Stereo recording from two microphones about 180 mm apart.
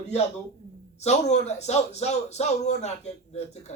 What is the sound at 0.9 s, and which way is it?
A man's voice, 40° left (ahead or behind).